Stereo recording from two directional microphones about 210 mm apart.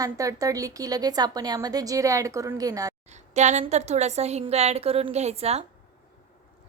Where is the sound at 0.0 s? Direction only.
15° right (ahead or behind).